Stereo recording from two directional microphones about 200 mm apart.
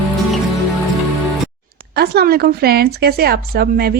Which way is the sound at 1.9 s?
50° right (ahead or behind).